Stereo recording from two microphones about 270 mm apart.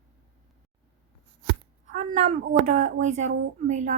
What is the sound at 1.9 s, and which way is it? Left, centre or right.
A woman's voice, right.